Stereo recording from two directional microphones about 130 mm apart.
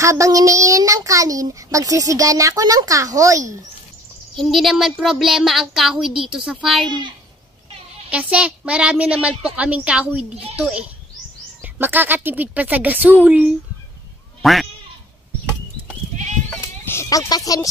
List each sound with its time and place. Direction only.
0.0 s a child's voice: 25° right (ahead or behind)
4.4 s speech: centre (ahead or behind)
8.1 s speech: 10° right (ahead or behind)
14.4 s quack: centre (ahead or behind)
16.8 s speech: 20° left (ahead or behind)